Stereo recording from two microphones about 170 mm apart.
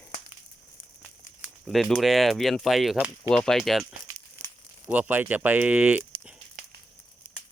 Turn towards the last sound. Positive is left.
turn(degrees=-60)  # may be behind; listen again after turning